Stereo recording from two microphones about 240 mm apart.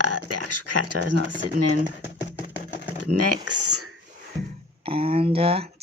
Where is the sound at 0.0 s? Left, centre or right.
Right.